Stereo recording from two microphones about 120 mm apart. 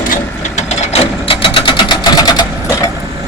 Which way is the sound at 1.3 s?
45° left (ahead or behind).